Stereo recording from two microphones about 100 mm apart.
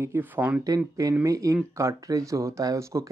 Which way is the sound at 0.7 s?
35° right (ahead or behind).